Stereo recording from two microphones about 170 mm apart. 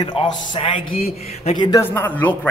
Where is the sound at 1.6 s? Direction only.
25° left (ahead or behind).